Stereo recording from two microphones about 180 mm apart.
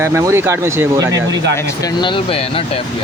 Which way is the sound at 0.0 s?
15° right (ahead or behind).